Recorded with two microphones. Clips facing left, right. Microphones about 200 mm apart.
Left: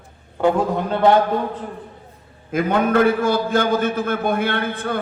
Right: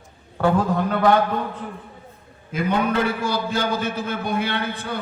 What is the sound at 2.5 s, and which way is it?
A man's voice, 50° left (ahead or behind).